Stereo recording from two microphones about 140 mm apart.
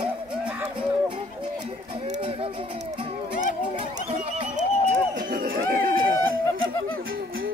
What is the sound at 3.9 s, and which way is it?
Neigh, 55° right (ahead or behind).